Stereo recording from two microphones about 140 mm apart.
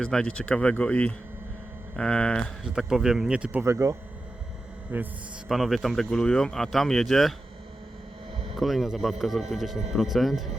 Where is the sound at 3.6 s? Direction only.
20° right (ahead or behind).